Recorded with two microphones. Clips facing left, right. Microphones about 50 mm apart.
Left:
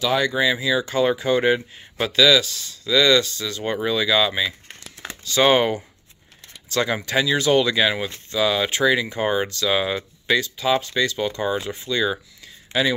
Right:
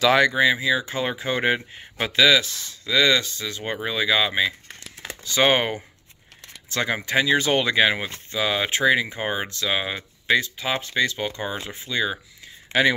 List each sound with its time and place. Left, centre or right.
0.3 s speech: right
11.6 s speech: centre